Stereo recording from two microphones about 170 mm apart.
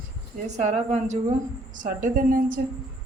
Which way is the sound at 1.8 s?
50° right (ahead or behind).